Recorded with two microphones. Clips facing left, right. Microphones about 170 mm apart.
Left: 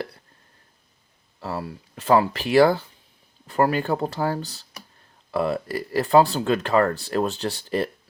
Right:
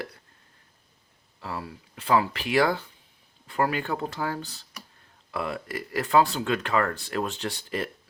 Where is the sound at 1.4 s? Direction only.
40° left (ahead or behind).